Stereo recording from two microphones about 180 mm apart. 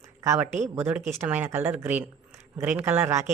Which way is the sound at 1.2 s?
10° right (ahead or behind).